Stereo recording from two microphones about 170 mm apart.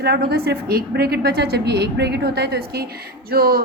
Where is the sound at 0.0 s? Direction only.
70° right (ahead or behind).